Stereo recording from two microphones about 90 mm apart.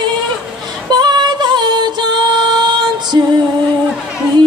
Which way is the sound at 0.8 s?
50° right (ahead or behind).